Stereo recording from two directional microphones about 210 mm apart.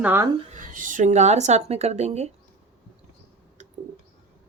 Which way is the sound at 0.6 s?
40° right (ahead or behind).